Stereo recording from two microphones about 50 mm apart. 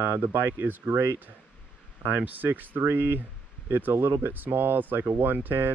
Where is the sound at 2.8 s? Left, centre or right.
Right.